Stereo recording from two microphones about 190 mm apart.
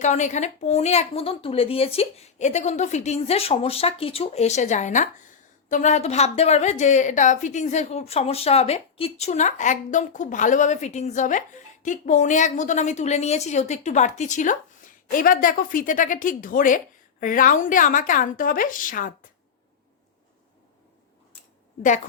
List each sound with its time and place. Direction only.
0.0 s a woman's voice: 40° left (ahead or behind)